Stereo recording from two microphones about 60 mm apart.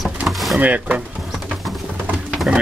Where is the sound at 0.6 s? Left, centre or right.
Right.